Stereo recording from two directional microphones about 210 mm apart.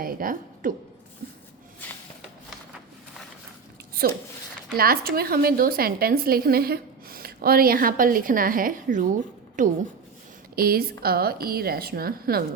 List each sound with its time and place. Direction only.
0.0 s a woman's voice: 40° right (ahead or behind)
4.8 s a woman's voice: 45° right (ahead or behind)